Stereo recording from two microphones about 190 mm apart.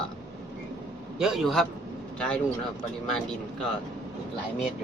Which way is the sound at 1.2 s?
Centre (ahead or behind).